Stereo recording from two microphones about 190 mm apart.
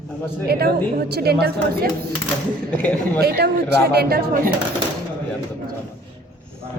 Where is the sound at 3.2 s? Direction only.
55° right (ahead or behind).